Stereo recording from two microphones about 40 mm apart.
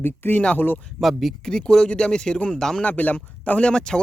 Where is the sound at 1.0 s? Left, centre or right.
Centre.